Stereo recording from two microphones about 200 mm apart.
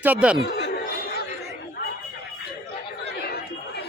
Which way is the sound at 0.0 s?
5° right (ahead or behind).